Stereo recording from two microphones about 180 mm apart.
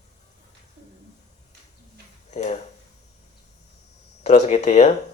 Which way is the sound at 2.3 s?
40° left (ahead or behind).